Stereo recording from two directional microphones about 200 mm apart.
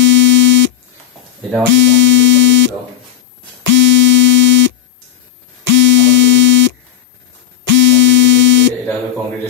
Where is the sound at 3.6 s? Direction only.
65° right (ahead or behind).